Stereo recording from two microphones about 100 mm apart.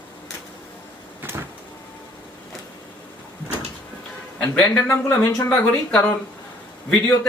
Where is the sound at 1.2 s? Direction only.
20° right (ahead or behind).